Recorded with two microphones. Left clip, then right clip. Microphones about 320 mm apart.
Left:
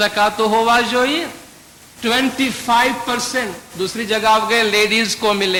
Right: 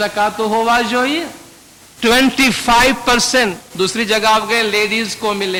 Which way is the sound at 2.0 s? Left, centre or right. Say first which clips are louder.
Right 5 dB; right.